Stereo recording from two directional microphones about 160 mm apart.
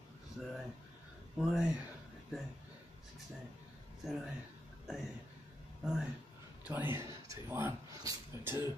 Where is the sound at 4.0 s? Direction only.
Centre (ahead or behind).